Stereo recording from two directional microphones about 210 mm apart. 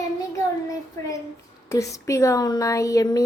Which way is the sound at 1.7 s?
15° left (ahead or behind).